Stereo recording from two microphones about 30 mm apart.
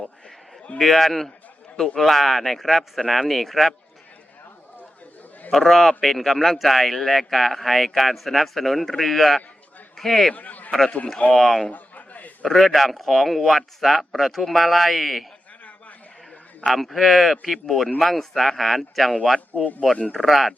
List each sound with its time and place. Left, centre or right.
0.8 s a man's voice: centre
5.5 s a man's voice: centre
10.3 s a man's voice: left
11.3 s speech: centre
11.7 s a sound: left
12.5 s speech: centre
16.6 s speech: centre
19.5 s speech: left
20.1 s speech: centre